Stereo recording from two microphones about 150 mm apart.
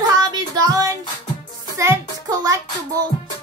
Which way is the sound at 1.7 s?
20° right (ahead or behind).